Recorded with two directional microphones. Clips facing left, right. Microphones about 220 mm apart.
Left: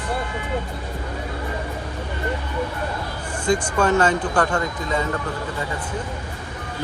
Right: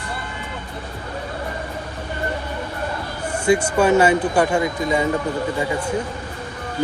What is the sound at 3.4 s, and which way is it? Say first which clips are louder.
A man's voice: right 3 dB; 10° right (ahead or behind).